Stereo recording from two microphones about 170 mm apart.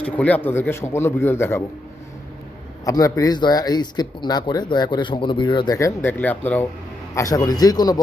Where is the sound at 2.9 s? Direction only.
20° left (ahead or behind).